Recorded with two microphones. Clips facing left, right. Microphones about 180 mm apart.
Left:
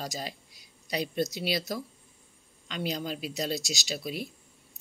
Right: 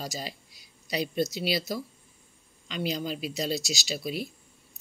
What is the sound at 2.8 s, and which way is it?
Speech, 45° left (ahead or behind).